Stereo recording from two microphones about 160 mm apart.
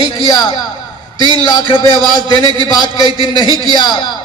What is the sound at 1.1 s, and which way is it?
Speech, 25° right (ahead or behind).